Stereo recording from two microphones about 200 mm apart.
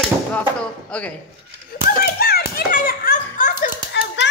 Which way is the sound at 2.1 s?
50° left (ahead or behind).